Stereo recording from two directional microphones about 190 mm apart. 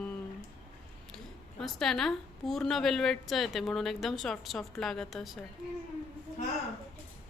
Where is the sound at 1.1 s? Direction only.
Centre (ahead or behind).